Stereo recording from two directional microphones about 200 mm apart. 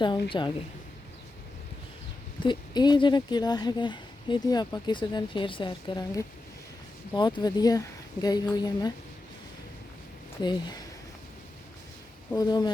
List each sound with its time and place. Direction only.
0.0 s speech: 25° left (ahead or behind)
2.4 s speech: 20° left (ahead or behind)
10.4 s speech: 20° left (ahead or behind)
12.3 s speech: 20° left (ahead or behind)